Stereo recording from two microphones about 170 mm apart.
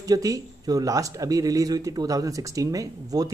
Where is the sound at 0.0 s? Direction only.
20° right (ahead or behind).